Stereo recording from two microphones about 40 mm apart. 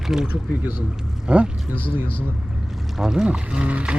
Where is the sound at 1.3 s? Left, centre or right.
Right.